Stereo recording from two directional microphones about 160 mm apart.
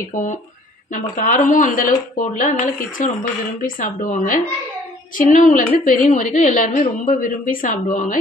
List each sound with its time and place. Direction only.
0.1 s a woman's voice: 55° left (ahead or behind)